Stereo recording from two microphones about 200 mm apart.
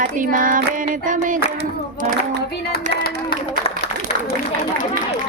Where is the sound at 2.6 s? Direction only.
50° left (ahead or behind).